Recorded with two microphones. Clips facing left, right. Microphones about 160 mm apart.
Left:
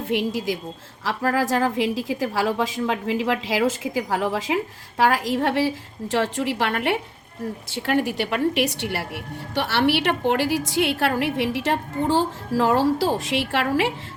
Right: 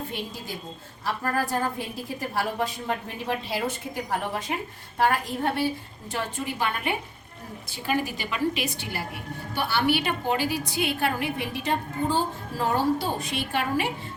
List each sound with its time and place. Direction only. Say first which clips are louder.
0.1 s a woman's voice: left 11 dB; 90° left